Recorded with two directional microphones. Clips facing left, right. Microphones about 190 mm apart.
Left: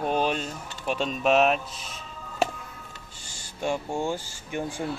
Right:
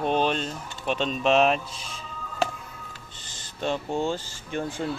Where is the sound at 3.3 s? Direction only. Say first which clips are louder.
Even; 10° left (ahead or behind).